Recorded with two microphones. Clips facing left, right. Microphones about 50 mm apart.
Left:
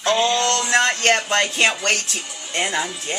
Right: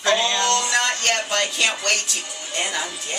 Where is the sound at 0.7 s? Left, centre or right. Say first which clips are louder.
Left 4 dB; left.